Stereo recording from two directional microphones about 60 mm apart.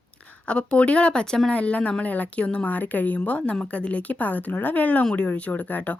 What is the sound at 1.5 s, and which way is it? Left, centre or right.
A woman's voice, left.